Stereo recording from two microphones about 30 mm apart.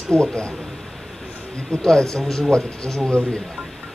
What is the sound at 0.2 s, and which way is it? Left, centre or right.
Speech, left.